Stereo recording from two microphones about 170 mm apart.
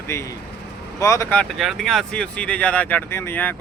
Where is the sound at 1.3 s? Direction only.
5° left (ahead or behind).